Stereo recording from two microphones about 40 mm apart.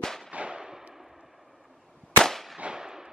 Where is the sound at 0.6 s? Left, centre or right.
Centre.